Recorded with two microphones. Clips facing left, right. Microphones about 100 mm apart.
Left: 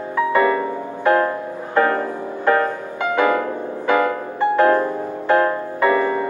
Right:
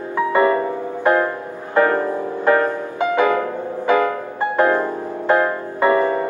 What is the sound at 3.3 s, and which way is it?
Music, 20° right (ahead or behind).